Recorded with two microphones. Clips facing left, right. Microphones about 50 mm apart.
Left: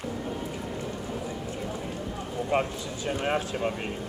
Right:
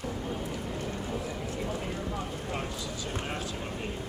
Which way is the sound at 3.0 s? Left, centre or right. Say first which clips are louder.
Left 10 dB; left.